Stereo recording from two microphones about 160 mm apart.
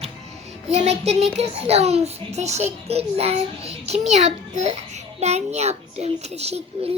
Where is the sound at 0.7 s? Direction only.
40° right (ahead or behind).